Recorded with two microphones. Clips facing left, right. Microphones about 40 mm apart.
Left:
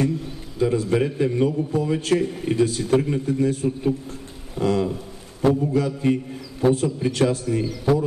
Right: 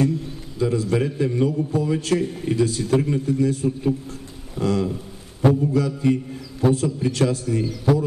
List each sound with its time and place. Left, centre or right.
0.6 s a man's voice: centre